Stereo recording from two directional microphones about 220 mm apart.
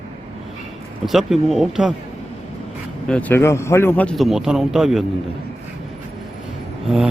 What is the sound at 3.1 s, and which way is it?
A man's voice, 10° left (ahead or behind).